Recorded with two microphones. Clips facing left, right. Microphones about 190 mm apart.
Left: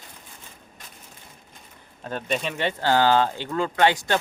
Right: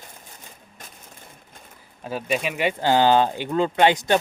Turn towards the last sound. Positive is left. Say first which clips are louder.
# right 2 dB
turn(degrees=-20)  # may be behind; listen again after turning